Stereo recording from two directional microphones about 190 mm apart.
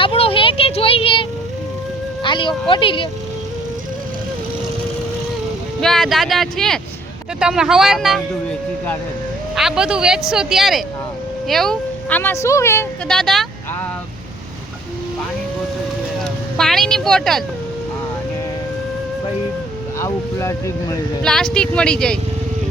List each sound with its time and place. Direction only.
0.0 s vehicle: 30° left (ahead or behind)
2.2 s speech: 25° left (ahead or behind)
5.8 s speech: centre (ahead or behind)
9.6 s speech: 5° right (ahead or behind); by 12.9 s 15° left (ahead or behind)
13.1 s speech: centre (ahead or behind)
16.1 s speech: centre (ahead or behind)
20.0 s speech: 15° left (ahead or behind)
21.2 s speech: 5° left (ahead or behind)